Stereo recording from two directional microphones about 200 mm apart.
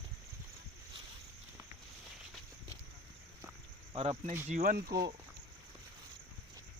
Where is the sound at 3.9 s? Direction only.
30° right (ahead or behind).